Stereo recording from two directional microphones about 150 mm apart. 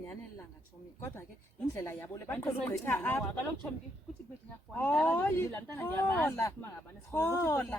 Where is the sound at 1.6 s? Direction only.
15° left (ahead or behind).